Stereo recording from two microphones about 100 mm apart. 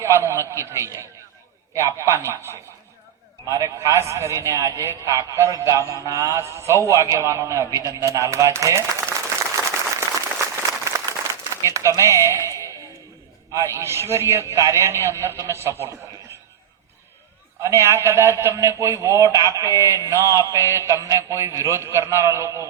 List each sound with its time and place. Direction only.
0.0 s a man's voice: 30° right (ahead or behind)
9.6 s applause: 30° right (ahead or behind)
11.6 s a man's voice: 30° right (ahead or behind)
13.5 s a man's voice: 30° right (ahead or behind)
17.6 s a man's voice: 25° right (ahead or behind)